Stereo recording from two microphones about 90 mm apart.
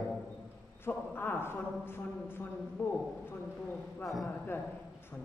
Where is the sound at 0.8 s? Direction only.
25° left (ahead or behind).